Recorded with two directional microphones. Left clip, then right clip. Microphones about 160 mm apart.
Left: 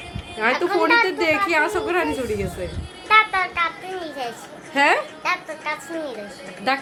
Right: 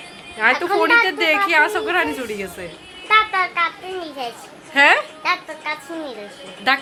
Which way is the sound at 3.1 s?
50° right (ahead or behind).